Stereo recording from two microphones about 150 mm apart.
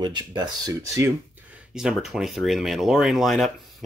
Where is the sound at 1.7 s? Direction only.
5° right (ahead or behind).